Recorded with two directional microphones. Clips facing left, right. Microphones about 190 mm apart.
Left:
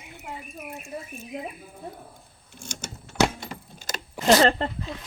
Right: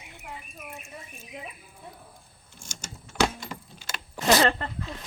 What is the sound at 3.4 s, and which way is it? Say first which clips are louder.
Keys jangling: left 2 dB; 45° left (ahead or behind).